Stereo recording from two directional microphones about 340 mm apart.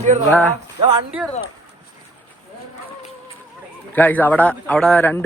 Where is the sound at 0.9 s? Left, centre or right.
Centre.